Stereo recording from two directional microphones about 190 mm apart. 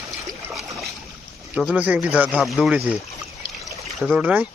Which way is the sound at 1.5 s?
5° right (ahead or behind).